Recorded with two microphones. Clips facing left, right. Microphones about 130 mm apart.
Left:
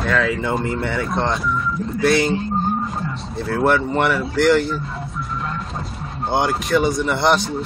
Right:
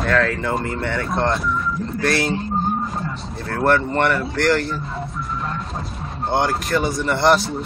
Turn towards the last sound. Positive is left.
turn(degrees=0)  # may be behind; listen again after turning